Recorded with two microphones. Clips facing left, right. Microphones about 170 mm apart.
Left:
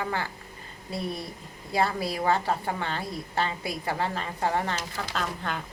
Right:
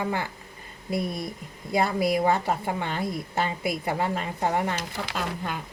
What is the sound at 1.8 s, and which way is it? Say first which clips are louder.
A woman's voice: right 4 dB; 15° right (ahead or behind).